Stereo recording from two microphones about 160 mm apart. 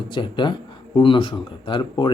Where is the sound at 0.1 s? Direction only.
30° left (ahead or behind).